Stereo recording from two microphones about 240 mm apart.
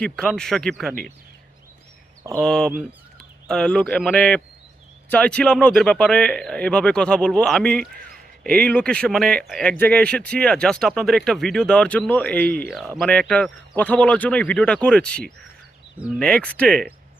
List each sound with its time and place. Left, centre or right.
0.0 s speech: centre
2.4 s speech: centre
7.8 s a sound: right
8.5 s speech: centre